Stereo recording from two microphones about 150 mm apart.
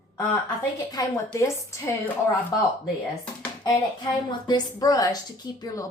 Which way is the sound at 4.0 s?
30° left (ahead or behind).